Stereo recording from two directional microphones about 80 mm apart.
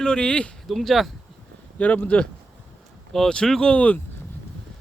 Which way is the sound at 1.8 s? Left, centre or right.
Centre.